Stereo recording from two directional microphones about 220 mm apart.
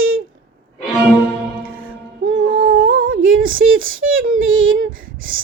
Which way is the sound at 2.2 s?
60° right (ahead or behind).